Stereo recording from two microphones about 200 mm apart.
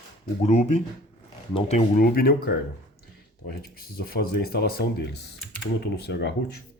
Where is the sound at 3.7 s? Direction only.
50° left (ahead or behind).